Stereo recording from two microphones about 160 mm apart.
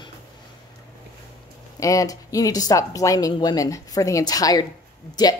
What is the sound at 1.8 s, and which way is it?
Speech, 20° left (ahead or behind).